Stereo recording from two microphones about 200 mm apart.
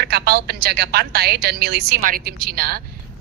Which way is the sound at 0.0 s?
55° right (ahead or behind).